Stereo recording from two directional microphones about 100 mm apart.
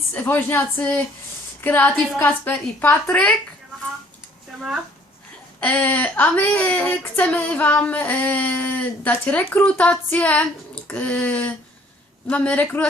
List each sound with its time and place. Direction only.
0.1 s speech: 20° left (ahead or behind)
5.5 s speech: 15° left (ahead or behind)